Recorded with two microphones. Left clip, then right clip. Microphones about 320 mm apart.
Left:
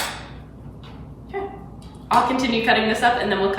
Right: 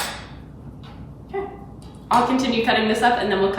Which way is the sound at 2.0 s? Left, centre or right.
Centre.